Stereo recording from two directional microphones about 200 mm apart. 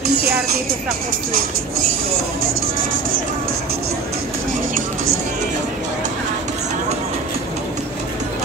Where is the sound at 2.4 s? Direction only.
45° right (ahead or behind).